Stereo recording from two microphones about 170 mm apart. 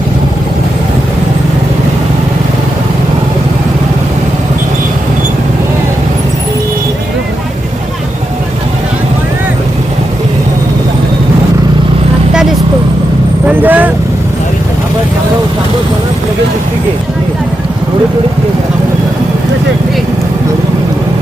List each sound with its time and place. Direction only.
13.6 s vehicle: 10° right (ahead or behind)